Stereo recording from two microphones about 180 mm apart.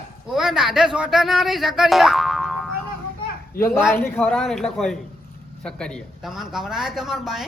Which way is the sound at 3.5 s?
55° left (ahead or behind).